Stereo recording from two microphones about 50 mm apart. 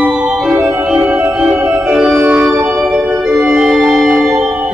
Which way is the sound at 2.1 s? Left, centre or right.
Right.